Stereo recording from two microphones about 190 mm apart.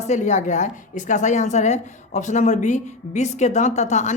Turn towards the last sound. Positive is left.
turn(degrees=40)  # may be behind; listen again after turning